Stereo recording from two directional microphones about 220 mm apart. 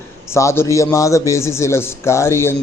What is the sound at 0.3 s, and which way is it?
A man's voice, 10° left (ahead or behind).